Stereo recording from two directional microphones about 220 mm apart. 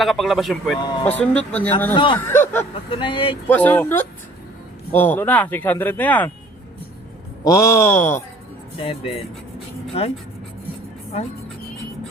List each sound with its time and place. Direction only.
0.0 s speech: centre (ahead or behind)
2.9 s speech: 20° left (ahead or behind)
3.4 s speech: 10° left (ahead or behind)
7.4 s speech: 15° left (ahead or behind)
8.8 s speech: 25° left (ahead or behind)